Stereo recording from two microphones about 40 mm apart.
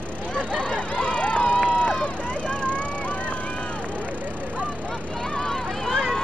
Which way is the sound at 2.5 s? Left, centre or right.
Left.